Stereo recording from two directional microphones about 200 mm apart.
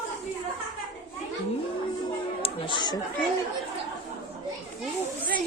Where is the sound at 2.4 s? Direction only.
25° left (ahead or behind).